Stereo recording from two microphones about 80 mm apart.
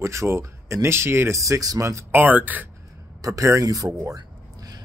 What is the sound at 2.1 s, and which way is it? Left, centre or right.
Speech, right.